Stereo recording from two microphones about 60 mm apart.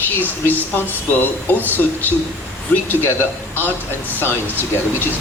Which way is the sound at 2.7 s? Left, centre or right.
Left.